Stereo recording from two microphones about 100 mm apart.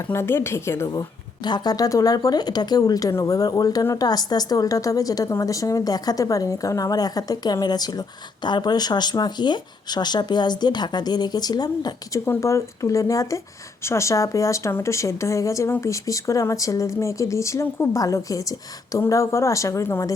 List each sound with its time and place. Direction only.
0.1 s a woman's voice: 25° left (ahead or behind)
1.5 s speech: 45° left (ahead or behind)
12.2 s speech: 30° left (ahead or behind)